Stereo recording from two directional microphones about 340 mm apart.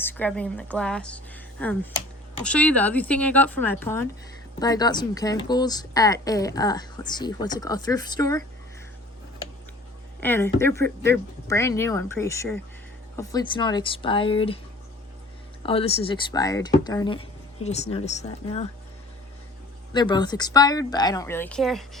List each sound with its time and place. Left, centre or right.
0.0 s a woman's voice: centre
10.2 s a woman's voice: centre
15.6 s a woman's voice: centre
19.9 s a woman's voice: centre